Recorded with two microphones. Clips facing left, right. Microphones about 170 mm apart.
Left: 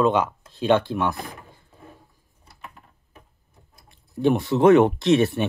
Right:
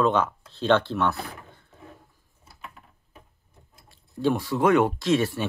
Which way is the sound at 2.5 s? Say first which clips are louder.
Left 1 dB; centre (ahead or behind).